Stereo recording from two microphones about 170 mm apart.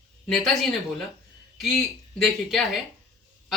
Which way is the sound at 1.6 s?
Centre (ahead or behind).